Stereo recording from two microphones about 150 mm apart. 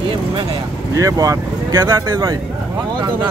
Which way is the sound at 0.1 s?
35° right (ahead or behind).